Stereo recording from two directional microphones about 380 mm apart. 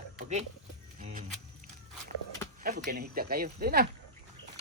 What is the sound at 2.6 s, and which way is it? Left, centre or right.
Speech, right.